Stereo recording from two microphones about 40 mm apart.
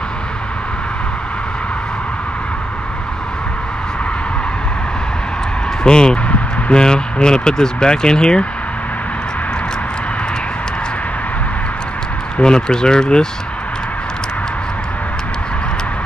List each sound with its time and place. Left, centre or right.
5.9 s speech: centre
12.4 s speech: left